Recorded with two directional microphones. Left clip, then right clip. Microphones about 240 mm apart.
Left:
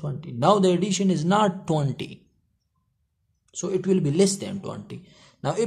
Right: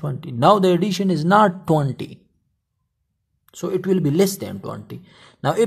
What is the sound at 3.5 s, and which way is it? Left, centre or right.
Speech, right.